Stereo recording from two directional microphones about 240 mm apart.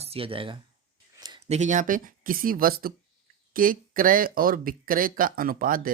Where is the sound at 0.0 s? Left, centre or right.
Right.